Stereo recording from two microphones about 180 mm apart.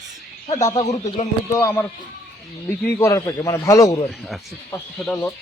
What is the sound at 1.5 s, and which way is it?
Speech, 15° left (ahead or behind).